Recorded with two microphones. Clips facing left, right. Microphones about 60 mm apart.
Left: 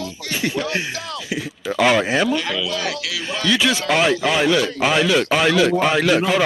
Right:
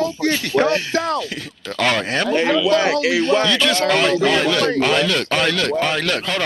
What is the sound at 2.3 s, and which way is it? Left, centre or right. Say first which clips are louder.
Speech: right 7 dB; right.